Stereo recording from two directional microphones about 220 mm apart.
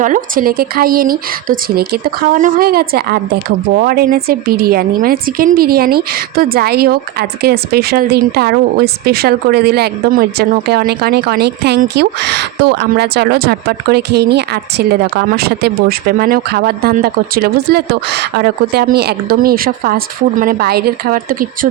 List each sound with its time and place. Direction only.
0.0 s a woman's voice: 40° right (ahead or behind)